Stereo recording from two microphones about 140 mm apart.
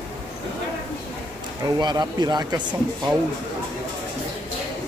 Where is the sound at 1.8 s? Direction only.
30° right (ahead or behind).